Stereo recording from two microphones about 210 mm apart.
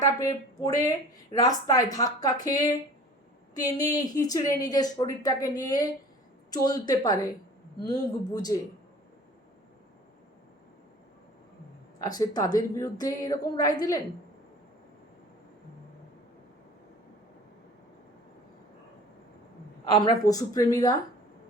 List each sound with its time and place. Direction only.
0.0 s a woman's voice: 15° left (ahead or behind)
11.9 s a woman's voice: 15° left (ahead or behind)
19.9 s a woman's voice: 20° left (ahead or behind)